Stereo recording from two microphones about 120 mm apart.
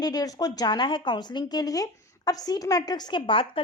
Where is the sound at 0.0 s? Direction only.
30° left (ahead or behind).